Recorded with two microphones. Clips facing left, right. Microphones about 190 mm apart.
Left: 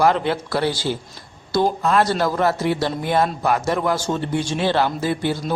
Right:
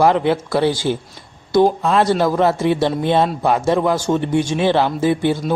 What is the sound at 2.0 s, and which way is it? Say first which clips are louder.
Speech: right 5 dB; 20° right (ahead or behind).